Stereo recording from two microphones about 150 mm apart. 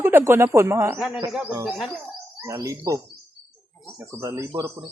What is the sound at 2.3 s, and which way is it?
Speech, 20° right (ahead or behind).